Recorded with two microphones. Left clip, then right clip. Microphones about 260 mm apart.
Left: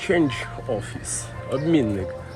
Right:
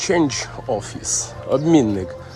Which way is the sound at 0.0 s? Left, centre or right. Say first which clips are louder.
Right 3 dB; centre.